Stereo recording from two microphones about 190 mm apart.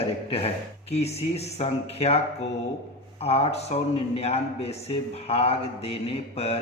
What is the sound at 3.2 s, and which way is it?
A man's voice, 30° left (ahead or behind).